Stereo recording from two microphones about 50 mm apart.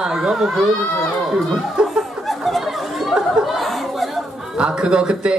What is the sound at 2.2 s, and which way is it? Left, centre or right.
Chatter, centre.